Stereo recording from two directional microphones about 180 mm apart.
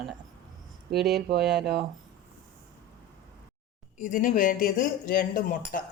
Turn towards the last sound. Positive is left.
turn(degrees=50)  # may be behind; listen again after turning